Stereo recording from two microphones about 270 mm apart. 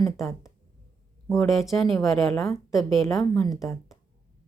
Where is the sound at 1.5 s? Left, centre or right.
Centre.